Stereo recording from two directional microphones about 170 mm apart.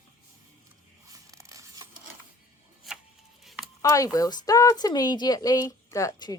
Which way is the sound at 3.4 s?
Centre (ahead or behind).